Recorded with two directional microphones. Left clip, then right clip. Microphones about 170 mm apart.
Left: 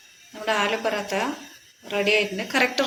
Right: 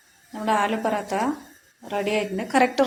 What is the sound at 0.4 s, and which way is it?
A woman's voice, 70° right (ahead or behind).